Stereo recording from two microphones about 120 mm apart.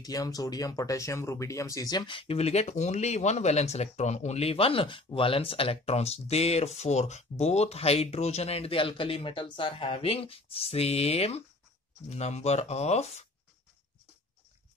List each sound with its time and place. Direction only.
0.0 s speech: 30° left (ahead or behind); by 13.3 s 65° left (ahead or behind)